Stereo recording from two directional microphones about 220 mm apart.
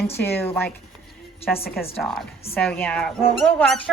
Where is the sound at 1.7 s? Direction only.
Centre (ahead or behind).